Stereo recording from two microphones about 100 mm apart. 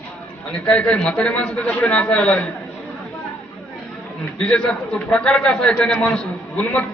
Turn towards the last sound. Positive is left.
turn(degrees=10)  # may be behind; listen again after turning